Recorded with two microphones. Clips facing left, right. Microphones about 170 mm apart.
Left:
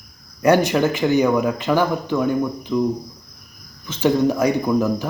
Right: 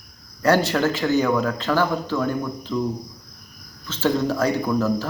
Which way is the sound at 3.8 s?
15° left (ahead or behind).